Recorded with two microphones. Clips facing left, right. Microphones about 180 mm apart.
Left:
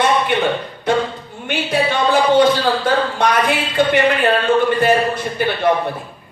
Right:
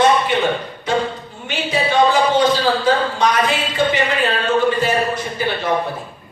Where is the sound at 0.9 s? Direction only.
60° left (ahead or behind).